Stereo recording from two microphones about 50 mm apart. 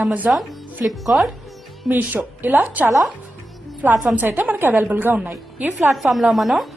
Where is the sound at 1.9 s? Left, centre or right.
Right.